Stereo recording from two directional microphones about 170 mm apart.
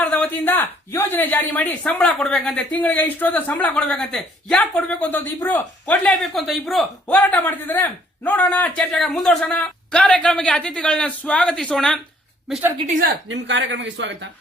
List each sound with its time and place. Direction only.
0.0 s speech: 10° left (ahead or behind)
13.2 s speech: 90° right